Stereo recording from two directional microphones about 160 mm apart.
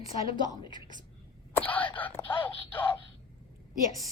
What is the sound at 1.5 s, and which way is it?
Whispering, 10° left (ahead or behind).